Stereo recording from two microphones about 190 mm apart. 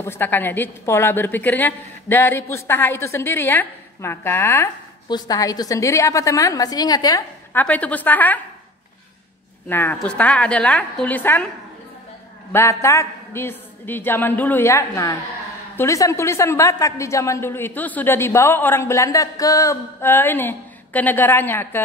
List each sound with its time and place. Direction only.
0.0 s a woman's voice: 10° left (ahead or behind)
9.7 s a woman's voice: 10° left (ahead or behind)
12.5 s a woman's voice: 15° left (ahead or behind)